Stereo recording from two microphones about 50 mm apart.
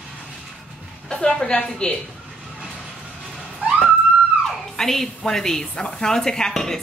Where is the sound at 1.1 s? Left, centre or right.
Centre.